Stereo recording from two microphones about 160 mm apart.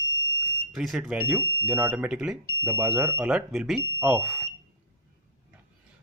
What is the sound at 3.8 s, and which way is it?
Speech, 15° right (ahead or behind).